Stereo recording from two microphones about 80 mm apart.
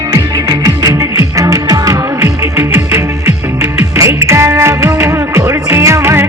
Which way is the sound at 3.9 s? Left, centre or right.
Right.